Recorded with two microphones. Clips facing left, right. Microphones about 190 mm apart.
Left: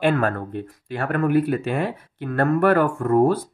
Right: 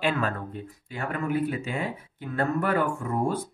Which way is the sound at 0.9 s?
65° left (ahead or behind).